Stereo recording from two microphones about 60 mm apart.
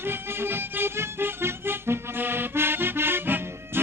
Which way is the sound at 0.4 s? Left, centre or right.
Right.